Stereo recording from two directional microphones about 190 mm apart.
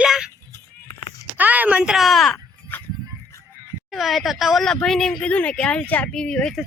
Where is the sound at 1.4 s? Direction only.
10° right (ahead or behind).